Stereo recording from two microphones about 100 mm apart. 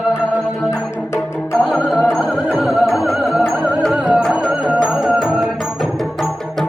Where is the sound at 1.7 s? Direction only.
5° right (ahead or behind).